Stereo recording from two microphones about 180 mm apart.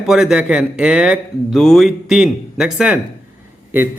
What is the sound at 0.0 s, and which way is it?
A man's voice, centre (ahead or behind).